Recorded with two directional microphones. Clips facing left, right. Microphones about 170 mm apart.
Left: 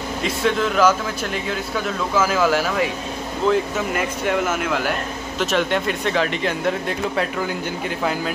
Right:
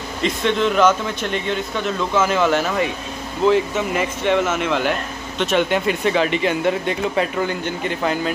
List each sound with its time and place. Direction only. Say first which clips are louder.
0.2 s speech: right 2 dB; 5° left (ahead or behind)